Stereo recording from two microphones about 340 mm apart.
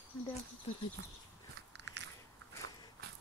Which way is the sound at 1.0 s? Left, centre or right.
Right.